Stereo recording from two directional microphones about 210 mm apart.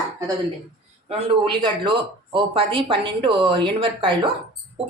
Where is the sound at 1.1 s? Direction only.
25° right (ahead or behind).